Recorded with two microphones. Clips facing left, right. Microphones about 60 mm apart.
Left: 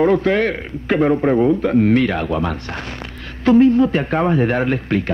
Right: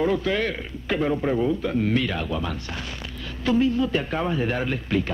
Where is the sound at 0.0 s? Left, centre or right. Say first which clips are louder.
Left 8 dB; left.